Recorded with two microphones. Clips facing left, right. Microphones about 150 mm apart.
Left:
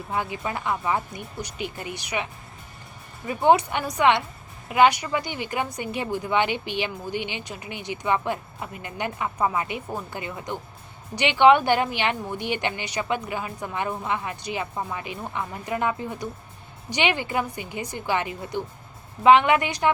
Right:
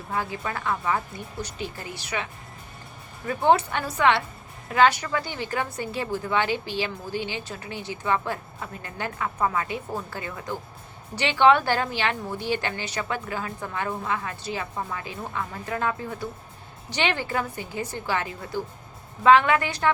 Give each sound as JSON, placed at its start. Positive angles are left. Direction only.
{"t": 0.1, "sound": "a woman's voice", "side_deg": 20}
{"t": 3.2, "sound": "a woman's voice", "side_deg": 15}